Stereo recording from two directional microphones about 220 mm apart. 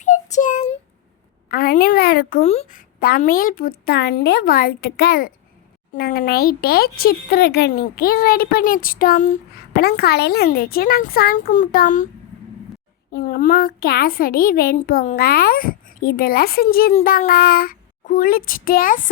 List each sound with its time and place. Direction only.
0.0 s child singing: 35° left (ahead or behind)
1.5 s speech: 40° left (ahead or behind)
13.1 s a woman's voice: 45° left (ahead or behind)